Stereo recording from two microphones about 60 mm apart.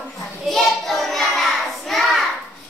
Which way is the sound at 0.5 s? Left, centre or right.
Centre.